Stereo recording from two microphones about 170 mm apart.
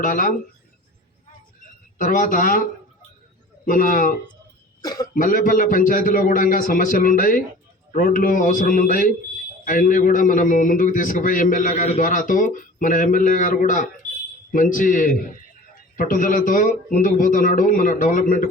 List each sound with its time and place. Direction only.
0.0 s a man's voice: 50° left (ahead or behind)
2.0 s a man's voice: 50° left (ahead or behind)
3.7 s a man's voice: 50° left (ahead or behind)
4.8 s speech: 20° left (ahead or behind)
5.1 s a man's voice: 50° left (ahead or behind)